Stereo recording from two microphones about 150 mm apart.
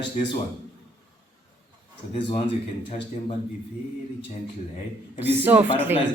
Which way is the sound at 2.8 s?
50° left (ahead or behind).